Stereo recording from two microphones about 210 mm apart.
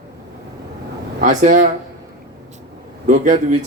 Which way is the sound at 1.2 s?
35° right (ahead or behind).